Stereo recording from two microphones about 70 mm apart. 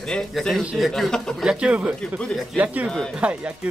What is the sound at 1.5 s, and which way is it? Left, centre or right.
Speech, centre.